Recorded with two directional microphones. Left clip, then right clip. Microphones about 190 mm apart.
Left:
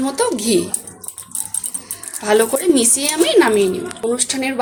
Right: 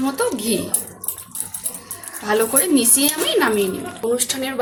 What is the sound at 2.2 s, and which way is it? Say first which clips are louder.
Speech: left 4 dB; 40° left (ahead or behind).